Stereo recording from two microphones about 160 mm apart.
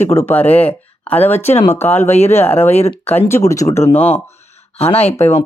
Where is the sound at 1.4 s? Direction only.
40° left (ahead or behind).